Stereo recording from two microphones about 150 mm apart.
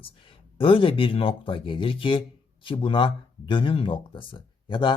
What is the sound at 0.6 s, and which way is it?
Speech, 35° left (ahead or behind).